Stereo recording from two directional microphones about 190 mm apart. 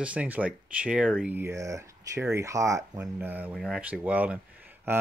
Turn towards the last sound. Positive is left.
turn(degrees=-10)  # may be behind; listen again after turning